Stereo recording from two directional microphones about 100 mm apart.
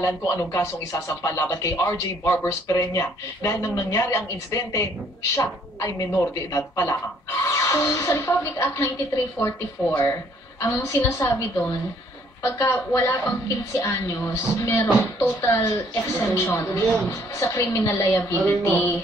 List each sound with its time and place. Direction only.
0.0 s a woman's voice: 30° left (ahead or behind)